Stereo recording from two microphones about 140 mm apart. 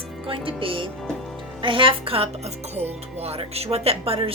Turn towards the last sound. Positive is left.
turn(degrees=-45)  # may be behind; listen again after turning